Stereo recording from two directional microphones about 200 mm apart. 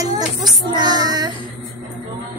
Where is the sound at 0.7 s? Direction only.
20° right (ahead or behind).